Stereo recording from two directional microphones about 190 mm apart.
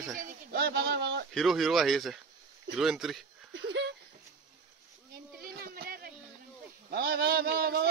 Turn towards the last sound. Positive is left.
turn(degrees=-55)  # may be behind; listen again after turning